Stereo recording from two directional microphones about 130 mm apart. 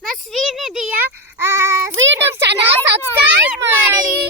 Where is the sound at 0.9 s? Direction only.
15° right (ahead or behind).